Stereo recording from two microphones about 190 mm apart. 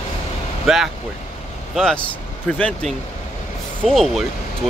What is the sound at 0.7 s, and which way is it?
Speech, centre (ahead or behind).